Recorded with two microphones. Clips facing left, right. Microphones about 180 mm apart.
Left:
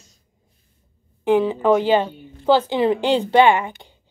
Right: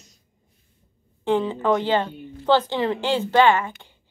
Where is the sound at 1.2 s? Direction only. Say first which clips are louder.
Left 4 dB; 10° left (ahead or behind).